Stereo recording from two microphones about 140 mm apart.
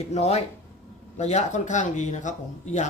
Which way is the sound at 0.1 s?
50° left (ahead or behind).